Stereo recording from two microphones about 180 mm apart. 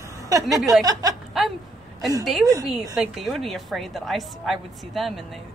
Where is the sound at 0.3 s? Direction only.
20° right (ahead or behind).